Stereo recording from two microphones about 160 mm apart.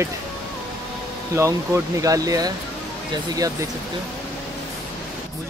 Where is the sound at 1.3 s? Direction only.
20° right (ahead or behind).